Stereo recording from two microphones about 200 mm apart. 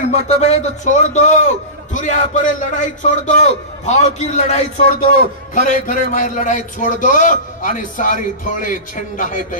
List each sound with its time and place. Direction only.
0.0 s a man's voice: 35° left (ahead or behind)